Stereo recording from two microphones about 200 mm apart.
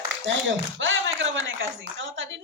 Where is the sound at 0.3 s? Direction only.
65° right (ahead or behind).